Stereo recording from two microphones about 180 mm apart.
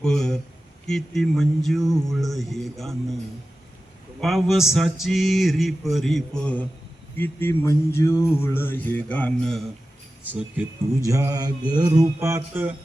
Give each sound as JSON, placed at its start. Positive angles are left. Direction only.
{"t": 0.0, "sound": "speech", "side_deg": 5}
{"t": 0.9, "sound": "mantra", "side_deg": 0}
{"t": 4.2, "sound": "mantra", "side_deg": 0}
{"t": 7.2, "sound": "music", "side_deg": 10}
{"t": 10.2, "sound": "speech", "side_deg": -10}